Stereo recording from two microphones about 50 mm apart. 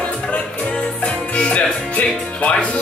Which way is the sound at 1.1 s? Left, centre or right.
Left.